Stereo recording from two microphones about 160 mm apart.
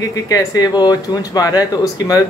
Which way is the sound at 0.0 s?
20° left (ahead or behind).